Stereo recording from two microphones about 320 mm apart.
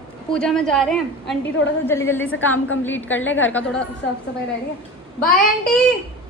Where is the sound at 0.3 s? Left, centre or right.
Centre.